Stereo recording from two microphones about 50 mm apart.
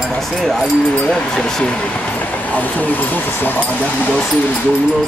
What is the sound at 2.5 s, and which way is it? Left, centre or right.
Speech, left.